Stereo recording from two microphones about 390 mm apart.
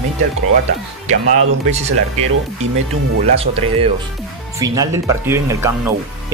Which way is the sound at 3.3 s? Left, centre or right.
Centre.